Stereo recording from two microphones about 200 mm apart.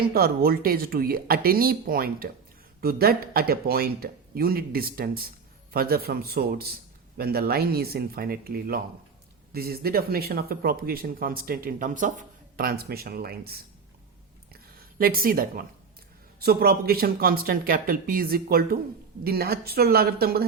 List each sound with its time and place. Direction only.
0.1 s speech: 50° right (ahead or behind)
14.5 s a sound: 50° right (ahead or behind)
16.4 s speech: 50° right (ahead or behind)